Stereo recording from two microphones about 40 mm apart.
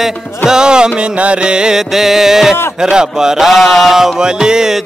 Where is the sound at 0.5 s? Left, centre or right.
Centre.